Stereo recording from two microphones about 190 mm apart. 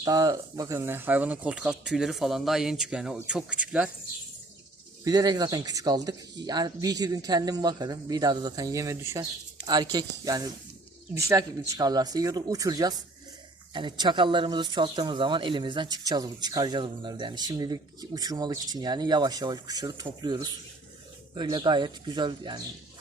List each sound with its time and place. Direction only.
0.0 s speech: 20° right (ahead or behind)
5.0 s speech: 20° right (ahead or behind)